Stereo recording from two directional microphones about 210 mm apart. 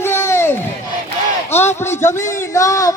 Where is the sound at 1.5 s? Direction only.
10° left (ahead or behind).